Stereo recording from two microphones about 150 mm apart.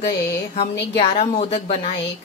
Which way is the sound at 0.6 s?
35° left (ahead or behind).